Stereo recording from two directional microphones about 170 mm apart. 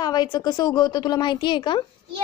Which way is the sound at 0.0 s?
25° left (ahead or behind).